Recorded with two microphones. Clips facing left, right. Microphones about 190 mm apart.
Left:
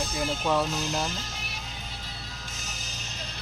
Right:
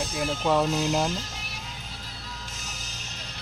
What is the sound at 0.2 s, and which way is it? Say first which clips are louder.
Speech: right 3 dB; 15° right (ahead or behind).